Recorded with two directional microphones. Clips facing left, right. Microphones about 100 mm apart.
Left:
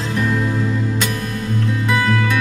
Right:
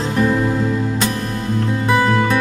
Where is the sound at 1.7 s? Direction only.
30° right (ahead or behind).